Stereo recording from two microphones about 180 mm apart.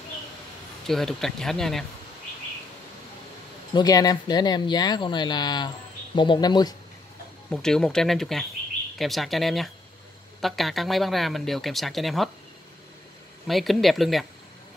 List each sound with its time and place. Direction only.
0.8 s speech: centre (ahead or behind)
3.7 s speech: 20° left (ahead or behind)
7.5 s speech: 5° left (ahead or behind)
13.5 s speech: centre (ahead or behind)